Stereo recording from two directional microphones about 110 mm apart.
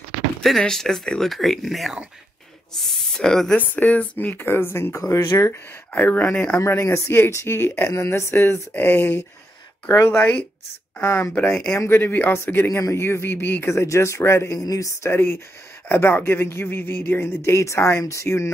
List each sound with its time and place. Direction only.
0.4 s speech: 5° left (ahead or behind); by 5.6 s 30° left (ahead or behind)
5.9 s speech: 15° left (ahead or behind)
6.6 s speech: 25° left (ahead or behind)
11.0 s speech: 20° left (ahead or behind)